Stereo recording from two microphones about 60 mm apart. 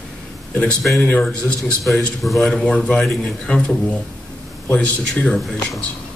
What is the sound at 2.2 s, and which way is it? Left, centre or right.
Speech, centre.